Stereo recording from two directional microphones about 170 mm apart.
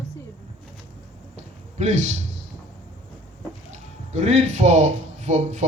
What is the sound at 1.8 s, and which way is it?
Speech, 45° right (ahead or behind).